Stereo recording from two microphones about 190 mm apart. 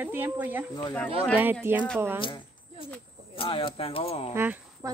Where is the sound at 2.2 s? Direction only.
25° left (ahead or behind).